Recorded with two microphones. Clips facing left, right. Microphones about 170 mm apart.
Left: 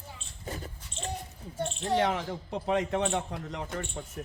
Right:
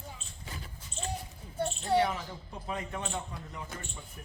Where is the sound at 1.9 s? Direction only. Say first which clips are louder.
Left 1 dB; 85° left.